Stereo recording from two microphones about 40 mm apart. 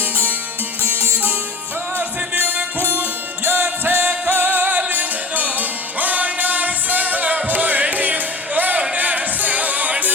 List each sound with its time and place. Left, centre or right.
2.0 s music: right